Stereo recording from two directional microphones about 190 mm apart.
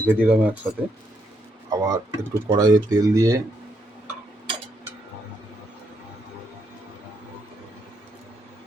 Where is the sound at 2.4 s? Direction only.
20° right (ahead or behind).